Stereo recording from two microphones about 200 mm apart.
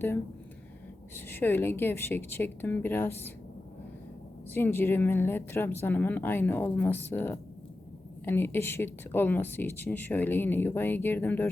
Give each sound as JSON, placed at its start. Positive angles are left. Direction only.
{"t": 1.1, "sound": "speech", "side_deg": 10}
{"t": 4.5, "sound": "speech", "side_deg": 10}